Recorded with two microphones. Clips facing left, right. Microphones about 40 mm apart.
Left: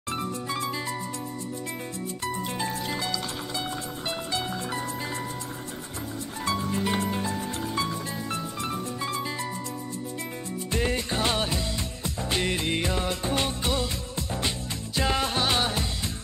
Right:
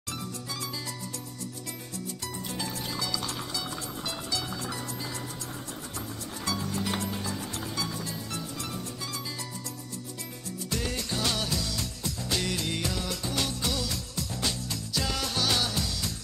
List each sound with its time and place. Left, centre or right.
0.1 s music: left
2.2 s music: left
6.4 s music: left
10.7 s music: left